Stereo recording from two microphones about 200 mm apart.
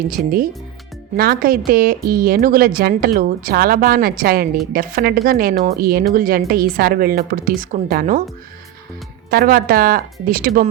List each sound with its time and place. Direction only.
0.2 s a woman's voice: 50° right (ahead or behind)
9.3 s a woman's voice: 45° right (ahead or behind)